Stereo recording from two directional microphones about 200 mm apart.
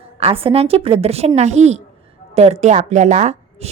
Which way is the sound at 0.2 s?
30° right (ahead or behind).